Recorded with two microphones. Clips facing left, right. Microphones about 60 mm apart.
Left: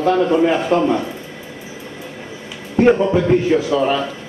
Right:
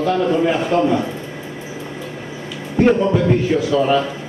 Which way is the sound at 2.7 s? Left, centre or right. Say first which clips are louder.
Left 1 dB; centre.